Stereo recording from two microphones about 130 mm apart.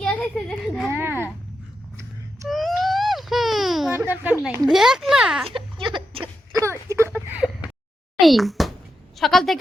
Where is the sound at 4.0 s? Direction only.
10° right (ahead or behind).